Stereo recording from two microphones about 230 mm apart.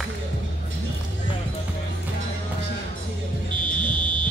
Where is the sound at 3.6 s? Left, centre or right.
Right.